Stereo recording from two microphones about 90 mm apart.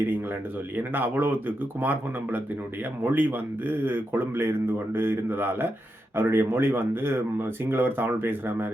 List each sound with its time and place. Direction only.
0.8 s speech: 20° right (ahead or behind)